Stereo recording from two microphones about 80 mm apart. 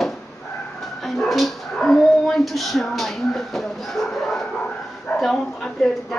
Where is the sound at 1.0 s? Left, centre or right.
Centre.